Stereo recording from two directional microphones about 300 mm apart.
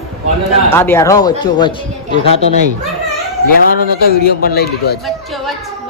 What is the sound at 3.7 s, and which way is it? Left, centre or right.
Speech, left.